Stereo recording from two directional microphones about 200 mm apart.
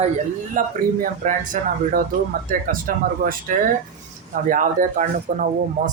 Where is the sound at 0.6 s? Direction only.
40° right (ahead or behind).